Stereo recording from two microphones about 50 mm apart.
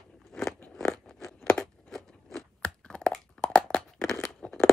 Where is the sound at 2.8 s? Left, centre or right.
Centre.